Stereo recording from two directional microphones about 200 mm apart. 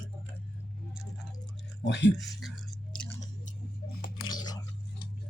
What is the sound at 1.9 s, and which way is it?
Speech, 60° left (ahead or behind).